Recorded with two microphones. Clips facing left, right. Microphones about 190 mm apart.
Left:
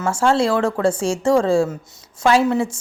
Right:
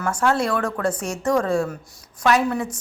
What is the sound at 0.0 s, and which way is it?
A woman's voice, 25° left (ahead or behind).